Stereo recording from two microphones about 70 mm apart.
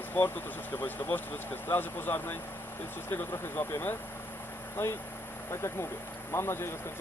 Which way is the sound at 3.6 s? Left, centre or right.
Left.